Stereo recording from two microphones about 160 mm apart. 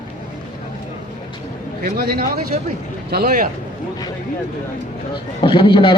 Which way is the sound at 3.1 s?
65° right (ahead or behind).